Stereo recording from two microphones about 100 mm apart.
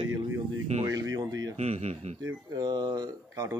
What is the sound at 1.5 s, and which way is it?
Speech, 90° right.